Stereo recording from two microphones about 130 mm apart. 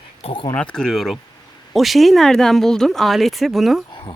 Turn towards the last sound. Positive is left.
turn(degrees=0)  # may be behind; listen again after turning